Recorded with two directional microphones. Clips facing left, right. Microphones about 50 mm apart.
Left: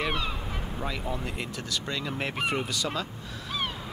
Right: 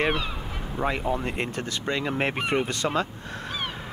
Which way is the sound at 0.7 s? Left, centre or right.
Right.